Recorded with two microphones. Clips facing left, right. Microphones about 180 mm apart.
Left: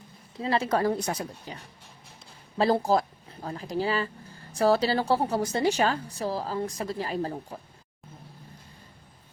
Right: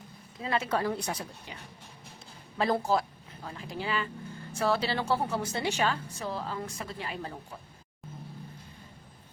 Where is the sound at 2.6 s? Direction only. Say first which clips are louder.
Left 4 dB; 30° left (ahead or behind).